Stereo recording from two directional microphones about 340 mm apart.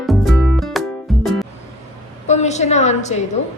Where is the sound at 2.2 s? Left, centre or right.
Centre.